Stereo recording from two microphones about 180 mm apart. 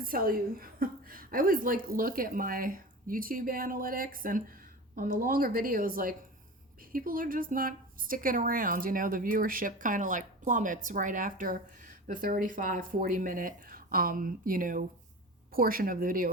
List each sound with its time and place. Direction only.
0.0 s a woman's voice: 55° right (ahead or behind)